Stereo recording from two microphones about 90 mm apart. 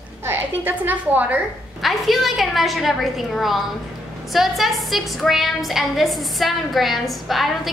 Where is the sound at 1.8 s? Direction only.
Centre (ahead or behind).